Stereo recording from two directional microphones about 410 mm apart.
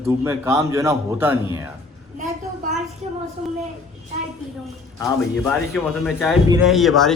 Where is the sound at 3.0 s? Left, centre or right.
Centre.